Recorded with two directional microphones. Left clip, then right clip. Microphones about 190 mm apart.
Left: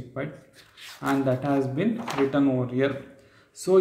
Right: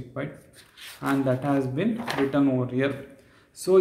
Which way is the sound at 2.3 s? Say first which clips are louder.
Even; 10° right (ahead or behind).